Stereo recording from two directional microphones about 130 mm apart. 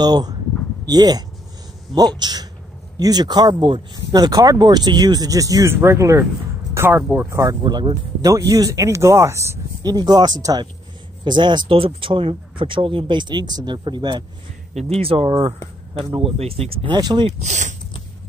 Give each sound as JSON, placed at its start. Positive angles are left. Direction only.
{"t": 0.0, "sound": "speech", "side_deg": -30}
{"t": 7.2, "sound": "speech", "side_deg": -25}
{"t": 14.7, "sound": "speech", "side_deg": -55}
{"t": 16.9, "sound": "speech", "side_deg": -35}
{"t": 17.4, "sound": "speech", "side_deg": -65}